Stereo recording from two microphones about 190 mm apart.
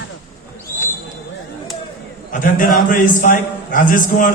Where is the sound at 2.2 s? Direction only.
45° left (ahead or behind).